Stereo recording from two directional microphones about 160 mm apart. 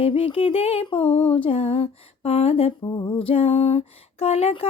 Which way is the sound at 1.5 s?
35° left (ahead or behind).